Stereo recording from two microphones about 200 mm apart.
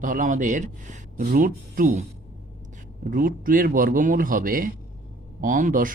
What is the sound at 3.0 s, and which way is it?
Speech, 45° right (ahead or behind).